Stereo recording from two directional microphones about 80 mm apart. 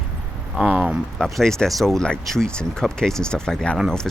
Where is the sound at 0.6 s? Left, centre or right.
Centre.